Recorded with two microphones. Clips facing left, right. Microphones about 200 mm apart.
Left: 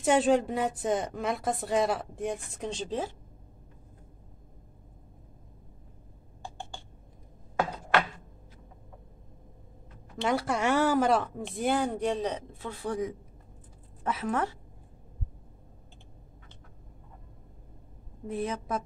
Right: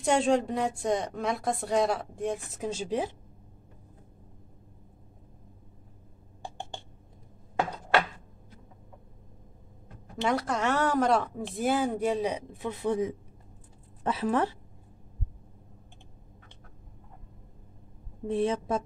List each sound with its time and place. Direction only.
0.0 s a woman's voice: 5° left (ahead or behind); by 3.2 s 15° right (ahead or behind)
10.2 s a woman's voice: 5° left (ahead or behind); by 14.6 s 30° right (ahead or behind)
18.2 s a woman's voice: 30° right (ahead or behind)